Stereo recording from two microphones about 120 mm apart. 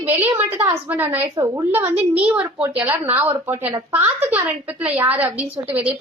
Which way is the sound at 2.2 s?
15° right (ahead or behind).